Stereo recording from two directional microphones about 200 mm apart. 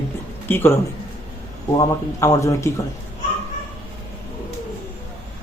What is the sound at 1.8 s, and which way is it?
Speech, 15° left (ahead or behind).